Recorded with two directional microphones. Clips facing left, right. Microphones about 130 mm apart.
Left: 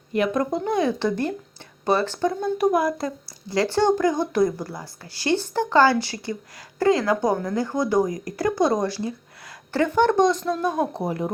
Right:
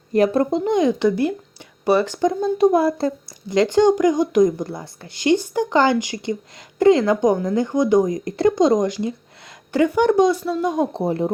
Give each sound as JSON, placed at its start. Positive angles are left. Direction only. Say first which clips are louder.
{"t": 0.1, "sound": "speech", "louder": "right 5 dB", "side_deg": -35}
{"t": 10.9, "sound": "speech", "louder": "right 5 dB", "side_deg": -25}